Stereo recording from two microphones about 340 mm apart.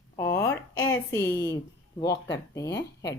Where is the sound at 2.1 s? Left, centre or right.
Left.